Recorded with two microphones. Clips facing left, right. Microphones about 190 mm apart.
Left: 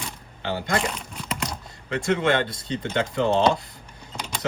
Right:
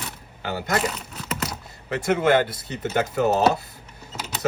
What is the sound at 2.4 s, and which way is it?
Speech, 5° right (ahead or behind).